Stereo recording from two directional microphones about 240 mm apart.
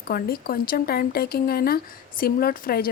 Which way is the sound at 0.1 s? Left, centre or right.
Left.